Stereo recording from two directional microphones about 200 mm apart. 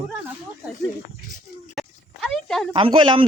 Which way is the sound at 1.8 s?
Centre (ahead or behind).